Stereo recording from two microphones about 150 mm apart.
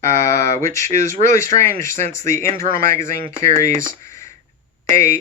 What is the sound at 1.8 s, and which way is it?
Speech, 50° right (ahead or behind).